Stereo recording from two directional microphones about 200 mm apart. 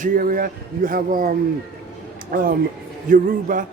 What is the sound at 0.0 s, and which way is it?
A man's voice, 45° right (ahead or behind).